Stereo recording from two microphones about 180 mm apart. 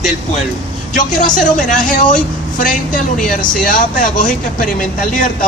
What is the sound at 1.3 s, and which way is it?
Speech, 45° left (ahead or behind).